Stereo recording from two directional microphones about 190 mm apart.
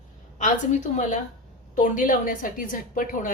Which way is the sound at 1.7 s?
45° left (ahead or behind).